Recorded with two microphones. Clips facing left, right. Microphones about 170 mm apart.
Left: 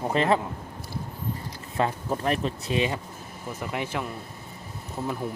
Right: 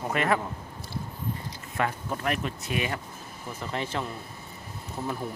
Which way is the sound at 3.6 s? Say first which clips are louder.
Left 1 dB; 10° left (ahead or behind).